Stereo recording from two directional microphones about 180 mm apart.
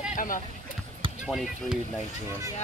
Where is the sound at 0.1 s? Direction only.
50° left (ahead or behind).